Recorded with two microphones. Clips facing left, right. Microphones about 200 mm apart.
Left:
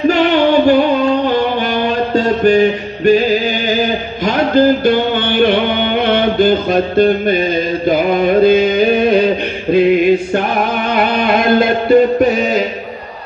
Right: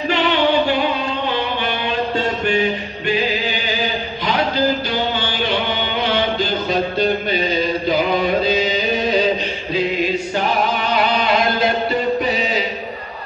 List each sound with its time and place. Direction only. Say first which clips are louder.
0.1 s music: left 2 dB; 45° left (ahead or behind)